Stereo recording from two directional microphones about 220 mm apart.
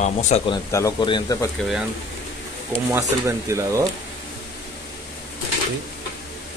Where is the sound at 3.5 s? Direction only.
15° right (ahead or behind).